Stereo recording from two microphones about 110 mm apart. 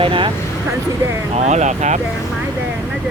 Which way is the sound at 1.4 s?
90° right.